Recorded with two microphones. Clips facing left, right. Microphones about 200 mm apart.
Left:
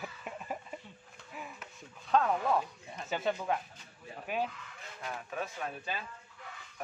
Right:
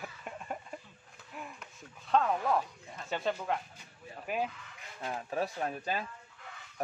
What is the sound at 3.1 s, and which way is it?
Speech, centre (ahead or behind).